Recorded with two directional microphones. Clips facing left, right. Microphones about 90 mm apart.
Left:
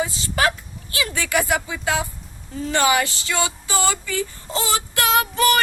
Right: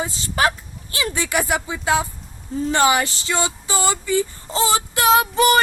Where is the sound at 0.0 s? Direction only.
30° right (ahead or behind).